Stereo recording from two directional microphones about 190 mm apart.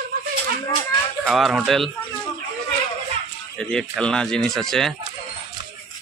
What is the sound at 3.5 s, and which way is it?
Speech, 5° left (ahead or behind).